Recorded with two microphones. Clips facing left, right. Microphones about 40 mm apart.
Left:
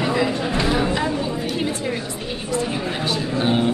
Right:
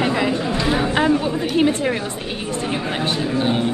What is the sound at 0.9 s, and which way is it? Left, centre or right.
Chatter, right.